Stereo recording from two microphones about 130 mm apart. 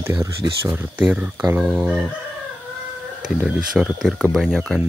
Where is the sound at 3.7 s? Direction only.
5° right (ahead or behind).